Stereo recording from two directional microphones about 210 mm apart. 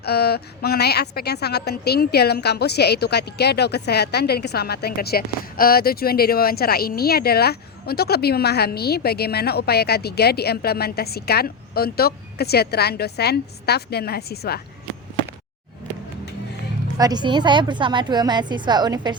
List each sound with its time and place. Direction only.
0.0 s a woman's voice: 50° left (ahead or behind)
17.0 s a woman's voice: 20° right (ahead or behind)